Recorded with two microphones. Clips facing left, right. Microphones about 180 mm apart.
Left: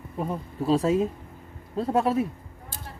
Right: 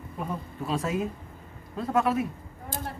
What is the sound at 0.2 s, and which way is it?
Speech, 30° left (ahead or behind).